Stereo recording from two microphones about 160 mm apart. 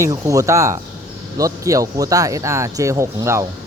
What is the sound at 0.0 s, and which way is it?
Speech, 20° right (ahead or behind).